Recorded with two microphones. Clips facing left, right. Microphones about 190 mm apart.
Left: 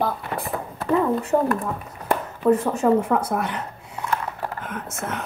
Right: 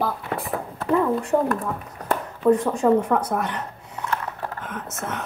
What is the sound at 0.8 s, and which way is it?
Speech, 5° left (ahead or behind).